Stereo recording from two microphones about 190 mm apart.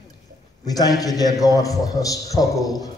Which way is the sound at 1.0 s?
20° left (ahead or behind).